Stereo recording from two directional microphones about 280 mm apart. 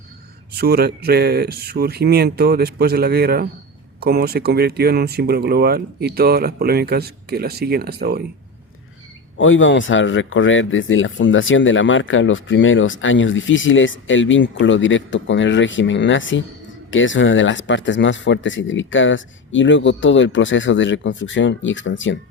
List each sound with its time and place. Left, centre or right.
0.5 s speech: right
9.4 s speech: left